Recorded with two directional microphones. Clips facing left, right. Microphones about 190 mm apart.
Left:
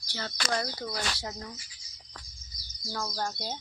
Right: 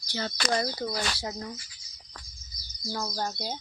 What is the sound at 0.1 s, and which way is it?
Speech, 20° right (ahead or behind).